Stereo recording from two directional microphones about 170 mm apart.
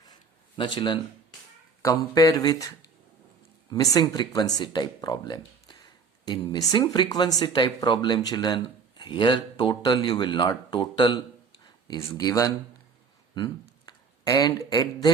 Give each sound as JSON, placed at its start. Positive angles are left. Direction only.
{"t": 0.1, "sound": "a sound", "side_deg": 25}
{"t": 1.8, "sound": "speech", "side_deg": 20}
{"t": 3.7, "sound": "speech", "side_deg": 20}